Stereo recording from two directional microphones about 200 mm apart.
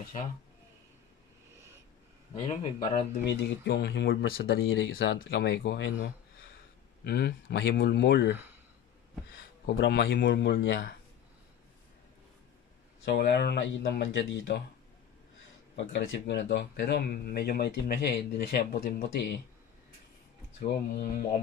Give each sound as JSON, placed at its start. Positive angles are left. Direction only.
{"t": 2.3, "sound": "speech", "side_deg": 30}
{"t": 3.6, "sound": "speech", "side_deg": 55}
{"t": 8.3, "sound": "speech", "side_deg": -10}
{"t": 9.7, "sound": "speech", "side_deg": 55}
{"t": 13.0, "sound": "speech", "side_deg": 55}
{"t": 15.7, "sound": "speech", "side_deg": 65}
{"t": 20.6, "sound": "speech", "side_deg": 50}